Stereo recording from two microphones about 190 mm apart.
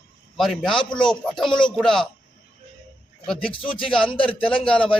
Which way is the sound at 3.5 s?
25° left (ahead or behind).